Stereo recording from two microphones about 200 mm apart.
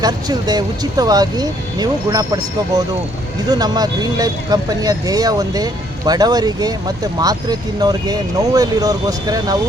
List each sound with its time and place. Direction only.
0.0 s speech: 20° right (ahead or behind)